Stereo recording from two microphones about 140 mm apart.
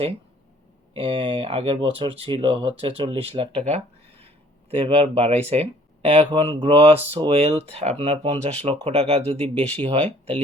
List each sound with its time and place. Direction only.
0.9 s speech: 40° right (ahead or behind)
3.7 s a sound: 50° right (ahead or behind)
4.7 s speech: 40° right (ahead or behind)